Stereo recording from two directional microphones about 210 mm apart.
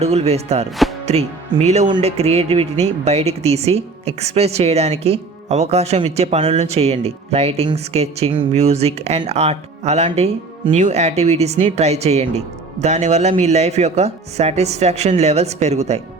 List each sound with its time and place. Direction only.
0.0 s speech: 30° right (ahead or behind)